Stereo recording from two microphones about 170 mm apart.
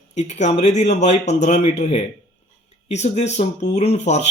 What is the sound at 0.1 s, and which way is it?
Speech, 45° left (ahead or behind).